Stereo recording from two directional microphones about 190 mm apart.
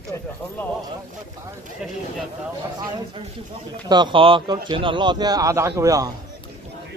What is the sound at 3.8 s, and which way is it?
Speech, 25° right (ahead or behind).